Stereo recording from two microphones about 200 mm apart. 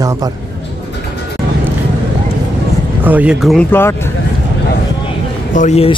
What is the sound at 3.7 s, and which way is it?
Speech, 10° left (ahead or behind).